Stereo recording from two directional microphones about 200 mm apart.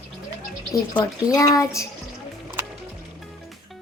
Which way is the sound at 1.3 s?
15° left (ahead or behind).